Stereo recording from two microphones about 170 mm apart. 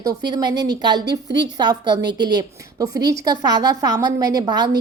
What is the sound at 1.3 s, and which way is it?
A woman's voice, 25° right (ahead or behind).